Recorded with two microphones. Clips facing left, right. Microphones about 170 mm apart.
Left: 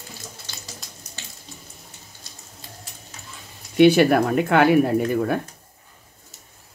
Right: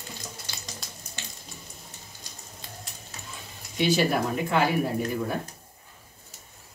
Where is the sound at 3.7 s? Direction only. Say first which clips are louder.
Left 10 dB; 60° left (ahead or behind).